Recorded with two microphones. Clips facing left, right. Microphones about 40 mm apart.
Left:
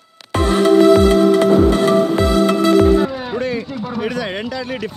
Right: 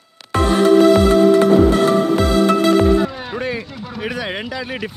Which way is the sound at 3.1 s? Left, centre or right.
Centre.